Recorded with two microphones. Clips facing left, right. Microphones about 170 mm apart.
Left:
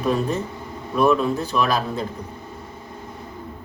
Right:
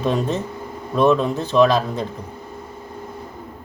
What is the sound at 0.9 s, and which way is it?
Speech, 20° right (ahead or behind).